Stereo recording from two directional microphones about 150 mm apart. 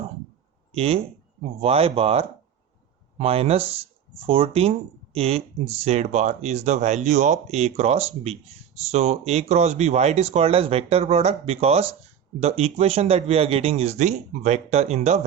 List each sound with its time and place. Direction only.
0.7 s speech: 40° right (ahead or behind)